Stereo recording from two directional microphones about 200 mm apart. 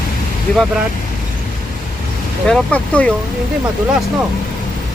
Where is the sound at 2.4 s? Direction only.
5° left (ahead or behind).